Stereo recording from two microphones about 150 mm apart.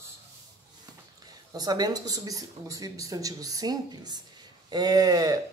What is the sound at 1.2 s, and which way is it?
Speech, 25° right (ahead or behind).